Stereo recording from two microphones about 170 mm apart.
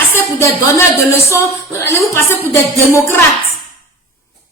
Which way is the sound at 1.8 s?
15° left (ahead or behind).